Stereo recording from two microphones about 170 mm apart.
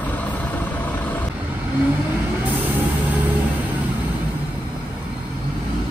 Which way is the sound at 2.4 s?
10° right (ahead or behind).